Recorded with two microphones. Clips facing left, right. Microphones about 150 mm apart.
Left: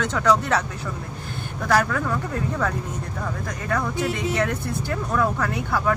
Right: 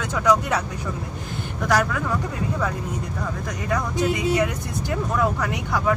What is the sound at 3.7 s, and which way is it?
Speech, 15° right (ahead or behind).